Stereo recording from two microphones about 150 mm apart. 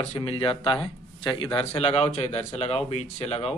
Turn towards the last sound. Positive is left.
turn(degrees=45)  # may be behind; listen again after turning